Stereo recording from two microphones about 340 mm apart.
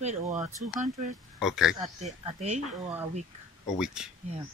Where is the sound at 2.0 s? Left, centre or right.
Centre.